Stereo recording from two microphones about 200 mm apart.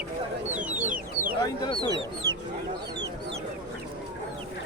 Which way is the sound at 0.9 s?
40° right (ahead or behind).